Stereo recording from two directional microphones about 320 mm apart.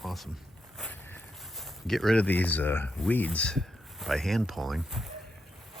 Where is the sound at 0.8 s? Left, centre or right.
Centre.